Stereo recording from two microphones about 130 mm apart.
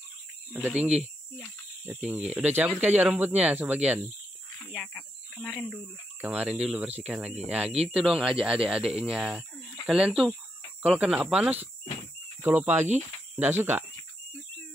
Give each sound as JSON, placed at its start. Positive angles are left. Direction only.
{"t": 0.6, "sound": "speech", "side_deg": -10}
{"t": 4.7, "sound": "cricket", "side_deg": 5}
{"t": 6.2, "sound": "speech", "side_deg": -10}
{"t": 7.7, "sound": "speech", "side_deg": -50}
{"t": 8.0, "sound": "speech", "side_deg": -5}
{"t": 12.4, "sound": "speech", "side_deg": -15}